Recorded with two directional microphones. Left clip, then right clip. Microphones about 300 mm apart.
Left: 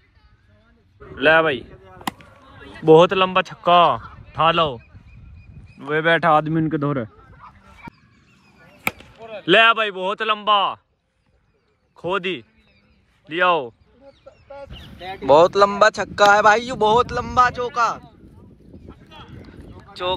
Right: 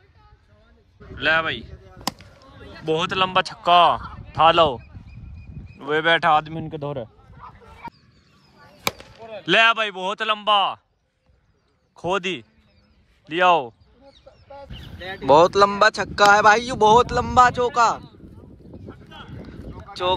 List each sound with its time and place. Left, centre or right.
1.1 s a man's voice: centre
3.0 s a man's voice: centre
5.8 s speech: centre
9.4 s a man's voice: centre
12.0 s speech: centre
14.2 s goose: left
15.2 s speech: centre
20.0 s speech: centre